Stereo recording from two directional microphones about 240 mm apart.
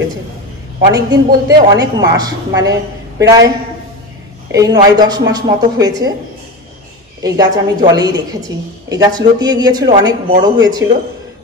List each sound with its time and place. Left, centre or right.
0.7 s a woman's voice: centre
4.5 s a woman's voice: centre
7.2 s a woman's voice: centre